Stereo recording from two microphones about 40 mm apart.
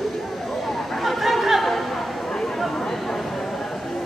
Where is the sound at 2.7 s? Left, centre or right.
Centre.